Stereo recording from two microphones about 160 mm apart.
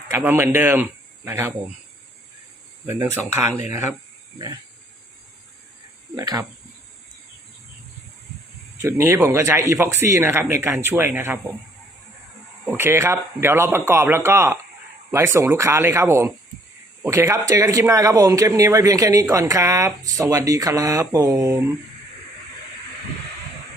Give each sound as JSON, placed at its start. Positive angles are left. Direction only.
{"t": 0.1, "sound": "speech", "side_deg": -15}
{"t": 2.8, "sound": "speech", "side_deg": -15}
{"t": 6.1, "sound": "speech", "side_deg": -20}
{"t": 8.8, "sound": "speech", "side_deg": -15}
{"t": 12.6, "sound": "speech", "side_deg": -15}